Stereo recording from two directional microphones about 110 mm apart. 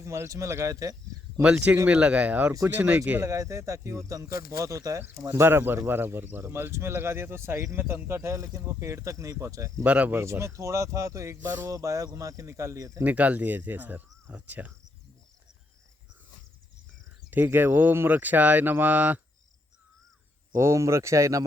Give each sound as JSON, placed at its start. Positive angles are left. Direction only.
{"t": 0.0, "sound": "speech", "side_deg": -25}
{"t": 1.4, "sound": "speech", "side_deg": -10}
{"t": 3.2, "sound": "speech", "side_deg": -30}
{"t": 9.8, "sound": "speech", "side_deg": -15}
{"t": 13.1, "sound": "speech", "side_deg": -15}
{"t": 17.3, "sound": "speech", "side_deg": -15}
{"t": 20.5, "sound": "speech", "side_deg": -25}